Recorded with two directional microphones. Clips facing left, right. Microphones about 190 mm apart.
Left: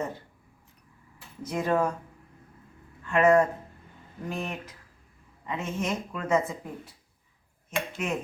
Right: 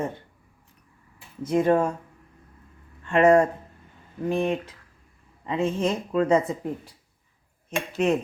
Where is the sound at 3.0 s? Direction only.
30° right (ahead or behind).